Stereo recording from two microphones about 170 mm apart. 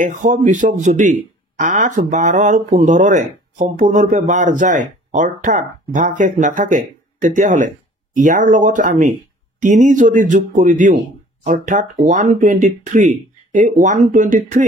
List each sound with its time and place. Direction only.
0.0 s speech: 50° right (ahead or behind)